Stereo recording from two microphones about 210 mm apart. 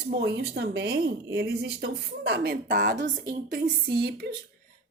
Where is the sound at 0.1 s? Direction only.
50° right (ahead or behind).